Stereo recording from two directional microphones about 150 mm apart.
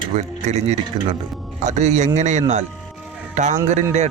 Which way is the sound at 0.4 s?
50° right (ahead or behind).